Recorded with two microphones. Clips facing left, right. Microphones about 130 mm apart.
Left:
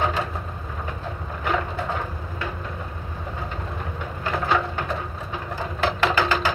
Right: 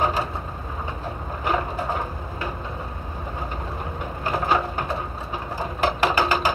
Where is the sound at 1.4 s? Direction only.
40° right (ahead or behind).